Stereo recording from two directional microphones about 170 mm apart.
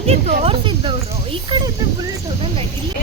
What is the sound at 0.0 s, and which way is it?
Speech, 35° right (ahead or behind).